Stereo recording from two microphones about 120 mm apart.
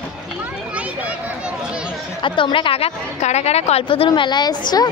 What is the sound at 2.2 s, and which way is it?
A woman's voice, 45° left (ahead or behind).